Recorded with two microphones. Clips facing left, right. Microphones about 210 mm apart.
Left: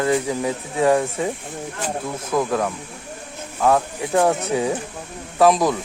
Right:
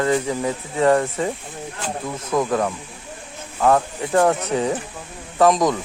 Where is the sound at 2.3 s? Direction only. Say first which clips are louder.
Right 1 dB; centre (ahead or behind).